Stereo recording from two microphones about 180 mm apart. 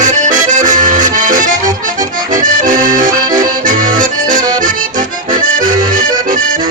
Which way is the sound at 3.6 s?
45° right (ahead or behind).